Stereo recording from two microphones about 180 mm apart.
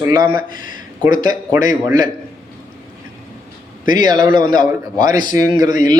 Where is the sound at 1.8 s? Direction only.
20° right (ahead or behind).